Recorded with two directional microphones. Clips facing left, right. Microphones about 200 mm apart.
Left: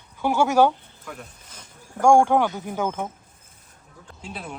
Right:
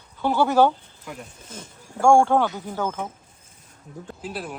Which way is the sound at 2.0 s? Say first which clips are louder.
Even; 15° left (ahead or behind).